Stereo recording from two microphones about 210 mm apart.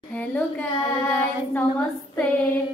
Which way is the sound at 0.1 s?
5° left (ahead or behind).